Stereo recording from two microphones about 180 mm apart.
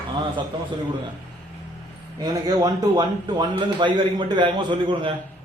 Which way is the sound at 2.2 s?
20° right (ahead or behind).